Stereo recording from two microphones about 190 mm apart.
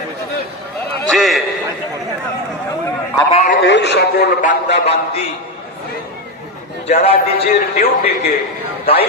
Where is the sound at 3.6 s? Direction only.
65° left (ahead or behind).